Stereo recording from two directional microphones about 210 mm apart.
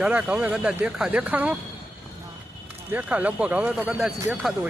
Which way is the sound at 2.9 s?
10° right (ahead or behind).